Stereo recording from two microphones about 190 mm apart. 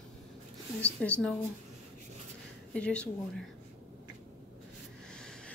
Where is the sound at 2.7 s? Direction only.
5° left (ahead or behind).